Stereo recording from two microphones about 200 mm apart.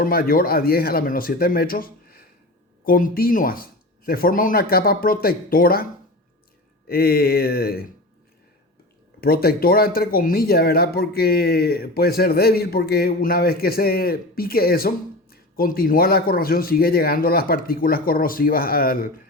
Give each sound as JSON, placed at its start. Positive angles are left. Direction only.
{"t": 0.0, "sound": "speech", "side_deg": 50}
{"t": 9.2, "sound": "speech", "side_deg": 50}